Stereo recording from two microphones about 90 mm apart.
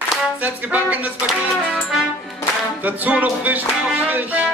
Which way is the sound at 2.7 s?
20° right (ahead or behind).